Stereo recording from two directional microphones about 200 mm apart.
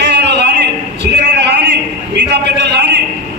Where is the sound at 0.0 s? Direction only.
60° right (ahead or behind).